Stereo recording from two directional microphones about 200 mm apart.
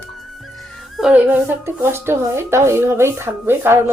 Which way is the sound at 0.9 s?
5° right (ahead or behind).